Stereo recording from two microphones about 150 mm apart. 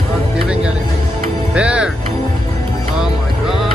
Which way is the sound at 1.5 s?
5° right (ahead or behind).